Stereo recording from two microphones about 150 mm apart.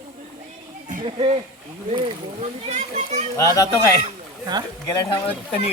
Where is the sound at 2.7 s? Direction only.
50° right (ahead or behind).